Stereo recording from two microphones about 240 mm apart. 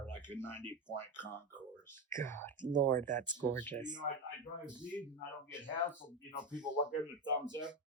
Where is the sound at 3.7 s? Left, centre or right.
Centre.